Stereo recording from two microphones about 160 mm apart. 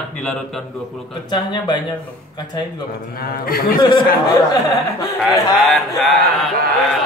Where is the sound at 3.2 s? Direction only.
70° left (ahead or behind).